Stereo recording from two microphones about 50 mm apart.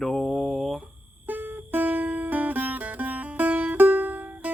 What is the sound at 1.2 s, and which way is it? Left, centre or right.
Music, right.